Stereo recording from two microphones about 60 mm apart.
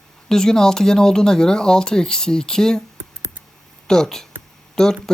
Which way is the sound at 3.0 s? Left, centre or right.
Right.